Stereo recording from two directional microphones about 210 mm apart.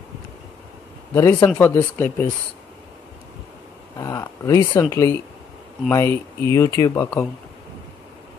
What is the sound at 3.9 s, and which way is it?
Speech, 15° left (ahead or behind).